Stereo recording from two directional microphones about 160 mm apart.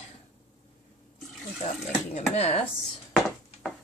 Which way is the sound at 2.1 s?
40° left (ahead or behind).